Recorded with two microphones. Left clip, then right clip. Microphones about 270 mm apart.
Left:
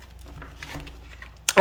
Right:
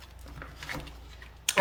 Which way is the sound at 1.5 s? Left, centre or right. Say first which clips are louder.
Left 8 dB; centre.